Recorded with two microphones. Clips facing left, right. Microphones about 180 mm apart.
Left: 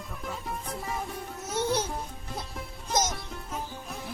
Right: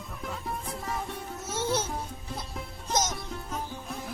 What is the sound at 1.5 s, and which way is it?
Music, 15° left (ahead or behind).